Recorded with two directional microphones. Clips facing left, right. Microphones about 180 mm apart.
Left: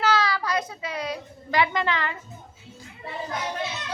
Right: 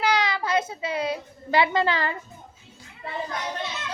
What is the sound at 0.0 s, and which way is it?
A child's voice, 20° right (ahead or behind).